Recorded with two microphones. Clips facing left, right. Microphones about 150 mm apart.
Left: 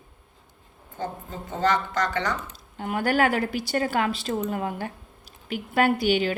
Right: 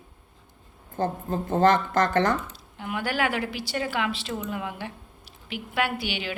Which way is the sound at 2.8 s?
45° left (ahead or behind).